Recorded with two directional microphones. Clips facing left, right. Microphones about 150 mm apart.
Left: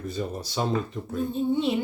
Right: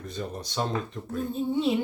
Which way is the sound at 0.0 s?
5° left (ahead or behind).